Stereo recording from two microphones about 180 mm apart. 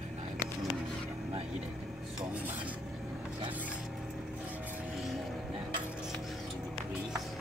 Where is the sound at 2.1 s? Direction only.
10° right (ahead or behind).